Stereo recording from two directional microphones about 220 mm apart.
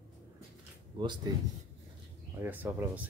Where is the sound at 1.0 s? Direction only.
20° right (ahead or behind).